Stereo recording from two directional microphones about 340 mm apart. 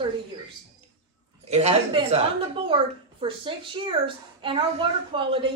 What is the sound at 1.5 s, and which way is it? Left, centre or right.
A man's voice, centre.